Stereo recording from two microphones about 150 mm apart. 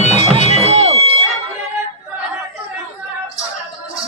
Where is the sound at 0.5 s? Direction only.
45° right (ahead or behind).